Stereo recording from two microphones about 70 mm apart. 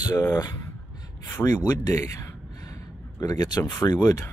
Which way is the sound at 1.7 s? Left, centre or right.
Left.